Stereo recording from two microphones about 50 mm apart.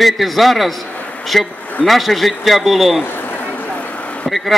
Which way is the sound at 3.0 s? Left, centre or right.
Left.